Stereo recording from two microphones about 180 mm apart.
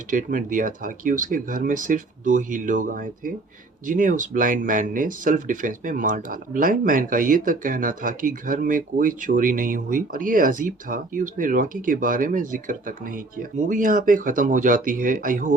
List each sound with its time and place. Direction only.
0.1 s speech: 45° right (ahead or behind)